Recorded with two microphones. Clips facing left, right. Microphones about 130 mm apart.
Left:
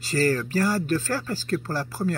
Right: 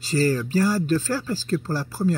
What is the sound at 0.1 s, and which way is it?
Speech, 55° left (ahead or behind).